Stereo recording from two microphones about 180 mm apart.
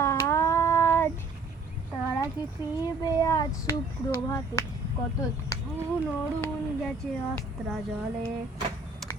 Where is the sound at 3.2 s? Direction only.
20° left (ahead or behind).